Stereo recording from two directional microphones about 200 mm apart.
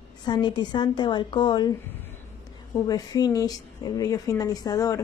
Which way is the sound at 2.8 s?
20° left (ahead or behind).